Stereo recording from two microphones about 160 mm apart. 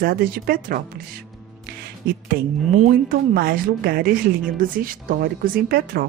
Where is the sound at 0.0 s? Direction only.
70° right (ahead or behind).